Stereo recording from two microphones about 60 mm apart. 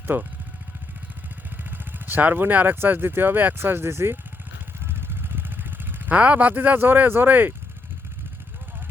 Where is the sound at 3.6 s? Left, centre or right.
Right.